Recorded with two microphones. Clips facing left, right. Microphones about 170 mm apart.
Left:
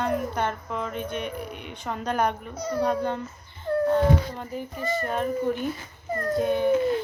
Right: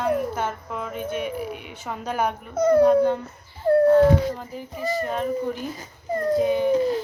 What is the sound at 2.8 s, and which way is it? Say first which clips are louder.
Speech: right 8 dB; 5° right (ahead or behind).